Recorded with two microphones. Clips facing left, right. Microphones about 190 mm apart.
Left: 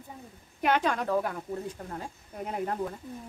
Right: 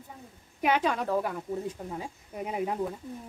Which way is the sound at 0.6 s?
5° right (ahead or behind).